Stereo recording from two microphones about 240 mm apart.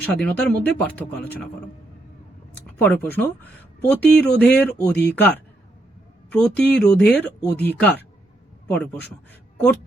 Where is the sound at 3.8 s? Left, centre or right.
Centre.